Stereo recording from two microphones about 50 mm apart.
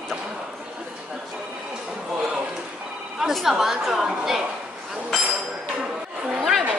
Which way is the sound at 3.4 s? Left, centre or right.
Centre.